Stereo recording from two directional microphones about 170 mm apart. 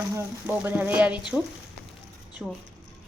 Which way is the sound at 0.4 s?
10° right (ahead or behind).